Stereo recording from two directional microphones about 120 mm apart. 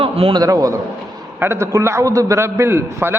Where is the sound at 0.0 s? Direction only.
50° right (ahead or behind).